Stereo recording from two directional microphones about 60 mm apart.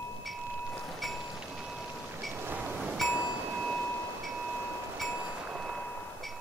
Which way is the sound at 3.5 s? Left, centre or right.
Centre.